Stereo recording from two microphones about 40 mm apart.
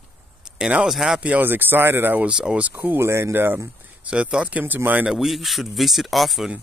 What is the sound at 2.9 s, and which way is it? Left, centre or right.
Speech, right.